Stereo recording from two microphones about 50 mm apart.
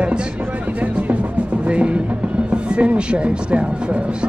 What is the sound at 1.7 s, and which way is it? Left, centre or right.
Speech, right.